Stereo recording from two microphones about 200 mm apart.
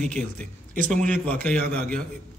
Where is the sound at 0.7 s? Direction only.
40° right (ahead or behind).